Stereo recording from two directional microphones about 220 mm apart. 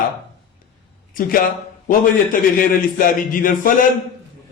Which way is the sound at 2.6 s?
40° left (ahead or behind).